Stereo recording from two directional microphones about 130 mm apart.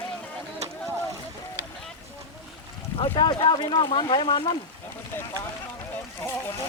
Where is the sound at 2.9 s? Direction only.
40° left (ahead or behind).